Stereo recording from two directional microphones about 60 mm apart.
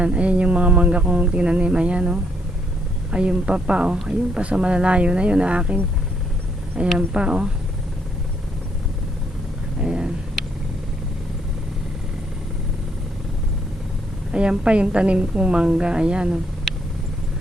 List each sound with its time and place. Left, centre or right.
0.0 s a woman's voice: centre
6.8 s a woman's voice: centre
9.8 s a sound: centre
14.3 s a woman's voice: centre